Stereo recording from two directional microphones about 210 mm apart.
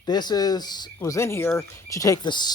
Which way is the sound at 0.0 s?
20° left (ahead or behind).